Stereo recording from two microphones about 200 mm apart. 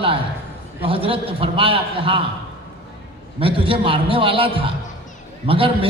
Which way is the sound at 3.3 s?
25° right (ahead or behind).